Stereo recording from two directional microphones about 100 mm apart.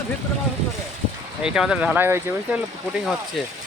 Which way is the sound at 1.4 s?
5° right (ahead or behind).